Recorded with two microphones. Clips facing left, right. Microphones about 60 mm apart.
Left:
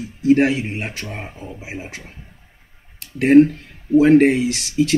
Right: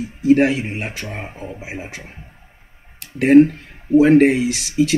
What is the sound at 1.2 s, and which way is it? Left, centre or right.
Speech, centre.